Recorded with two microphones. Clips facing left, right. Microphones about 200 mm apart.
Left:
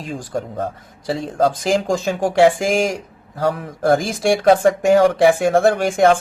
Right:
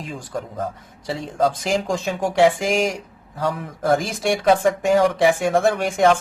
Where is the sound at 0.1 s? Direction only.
30° left (ahead or behind).